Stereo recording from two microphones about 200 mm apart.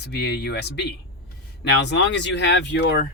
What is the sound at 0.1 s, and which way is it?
Speech, 55° left (ahead or behind).